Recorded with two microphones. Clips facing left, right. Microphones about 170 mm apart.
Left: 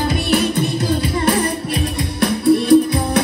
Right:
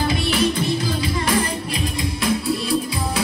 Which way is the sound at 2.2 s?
60° left (ahead or behind).